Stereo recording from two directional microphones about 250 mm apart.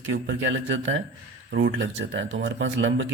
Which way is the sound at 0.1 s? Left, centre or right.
Right.